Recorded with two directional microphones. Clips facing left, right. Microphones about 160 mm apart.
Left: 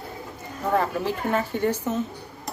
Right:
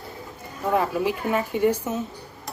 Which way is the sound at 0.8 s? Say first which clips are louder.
Right 1 dB; 10° right (ahead or behind).